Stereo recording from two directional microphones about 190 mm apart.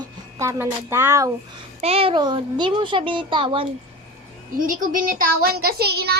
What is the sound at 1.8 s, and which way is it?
Speech, 30° right (ahead or behind).